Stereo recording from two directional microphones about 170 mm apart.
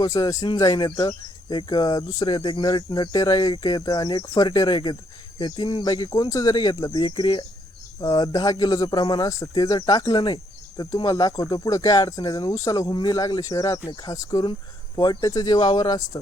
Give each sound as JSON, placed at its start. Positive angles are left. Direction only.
{"t": 0.0, "sound": "speech", "side_deg": 20}